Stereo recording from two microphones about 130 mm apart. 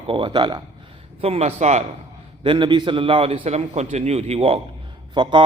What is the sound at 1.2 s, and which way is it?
Speech, 55° right (ahead or behind).